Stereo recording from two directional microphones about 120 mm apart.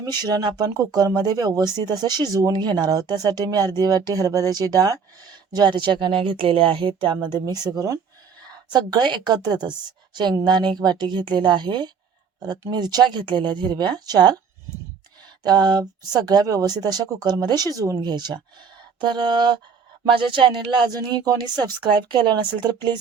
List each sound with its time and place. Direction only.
0.2 s speech: 35° right (ahead or behind)
15.4 s speech: 35° right (ahead or behind)